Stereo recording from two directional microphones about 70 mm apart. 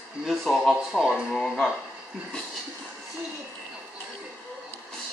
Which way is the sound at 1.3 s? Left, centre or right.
Centre.